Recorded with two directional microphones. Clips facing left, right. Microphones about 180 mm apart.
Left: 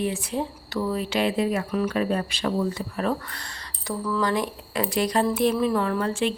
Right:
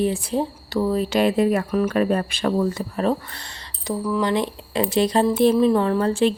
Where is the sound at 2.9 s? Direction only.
30° right (ahead or behind).